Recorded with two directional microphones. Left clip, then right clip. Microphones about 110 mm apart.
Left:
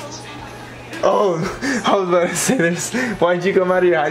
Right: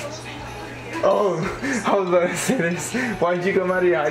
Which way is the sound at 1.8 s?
35° left (ahead or behind).